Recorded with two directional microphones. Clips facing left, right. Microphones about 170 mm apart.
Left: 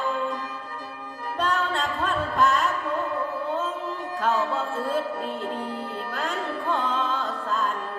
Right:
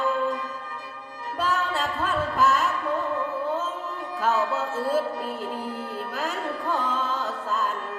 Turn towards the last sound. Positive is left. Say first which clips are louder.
# even
turn(degrees=-5)  # may be behind; listen again after turning